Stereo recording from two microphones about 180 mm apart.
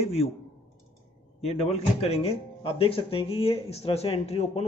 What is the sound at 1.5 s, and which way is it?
Speech, 35° left (ahead or behind).